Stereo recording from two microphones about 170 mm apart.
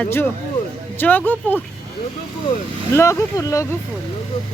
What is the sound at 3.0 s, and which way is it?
Speech, 15° left (ahead or behind).